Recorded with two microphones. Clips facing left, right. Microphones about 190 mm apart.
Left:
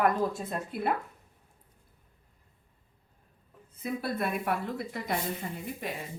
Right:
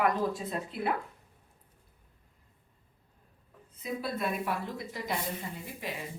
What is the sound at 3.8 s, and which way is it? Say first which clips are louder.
Speech: left 2 dB; 55° left (ahead or behind).